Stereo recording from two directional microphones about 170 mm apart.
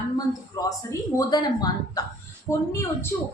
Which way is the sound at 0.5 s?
20° left (ahead or behind).